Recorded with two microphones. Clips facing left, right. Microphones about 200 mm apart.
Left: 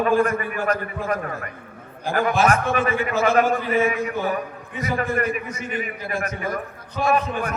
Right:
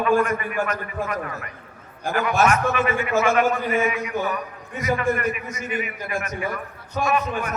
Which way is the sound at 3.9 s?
50° left (ahead or behind).